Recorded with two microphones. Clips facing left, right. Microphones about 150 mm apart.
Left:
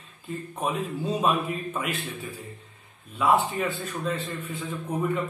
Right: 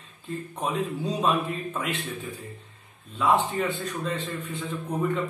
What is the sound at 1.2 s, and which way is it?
Speech, 5° left (ahead or behind).